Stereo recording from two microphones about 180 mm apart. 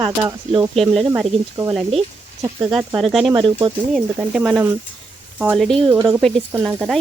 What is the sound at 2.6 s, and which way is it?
Speech, centre (ahead or behind).